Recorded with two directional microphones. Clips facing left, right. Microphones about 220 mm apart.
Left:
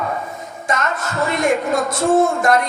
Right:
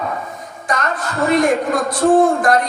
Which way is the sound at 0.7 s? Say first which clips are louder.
Right 1 dB; 25° left (ahead or behind).